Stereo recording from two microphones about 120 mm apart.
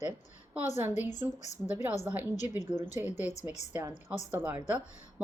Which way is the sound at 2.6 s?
85° left.